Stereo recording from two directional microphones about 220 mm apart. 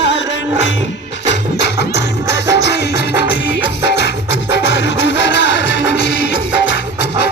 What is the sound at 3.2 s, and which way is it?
Music, 50° left (ahead or behind).